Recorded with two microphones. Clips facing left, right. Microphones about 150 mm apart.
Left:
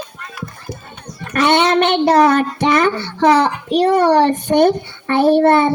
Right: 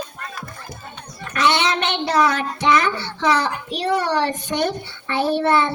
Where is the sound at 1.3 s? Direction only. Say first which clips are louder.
Left 6 dB; 55° left (ahead or behind).